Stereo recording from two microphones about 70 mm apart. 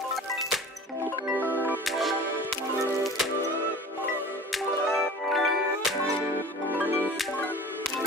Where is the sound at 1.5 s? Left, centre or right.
Left.